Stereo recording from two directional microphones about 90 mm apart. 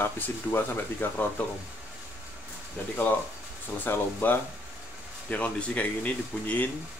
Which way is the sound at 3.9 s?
25° left (ahead or behind).